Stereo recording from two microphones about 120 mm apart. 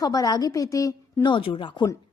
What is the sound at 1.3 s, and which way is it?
Speech, 40° left (ahead or behind).